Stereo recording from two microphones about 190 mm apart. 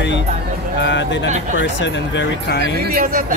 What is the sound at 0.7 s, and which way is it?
Speech, 70° left (ahead or behind).